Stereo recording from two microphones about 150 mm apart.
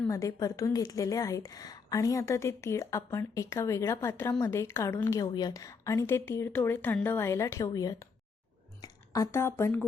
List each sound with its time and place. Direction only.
0.1 s a woman's voice: 20° left (ahead or behind)